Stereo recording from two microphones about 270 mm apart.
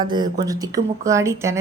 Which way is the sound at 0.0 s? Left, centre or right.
Centre.